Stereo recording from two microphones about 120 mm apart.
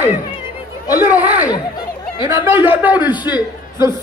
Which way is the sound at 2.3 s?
20° right (ahead or behind).